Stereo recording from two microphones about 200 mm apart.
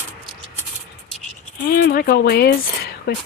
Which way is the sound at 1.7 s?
50° left (ahead or behind).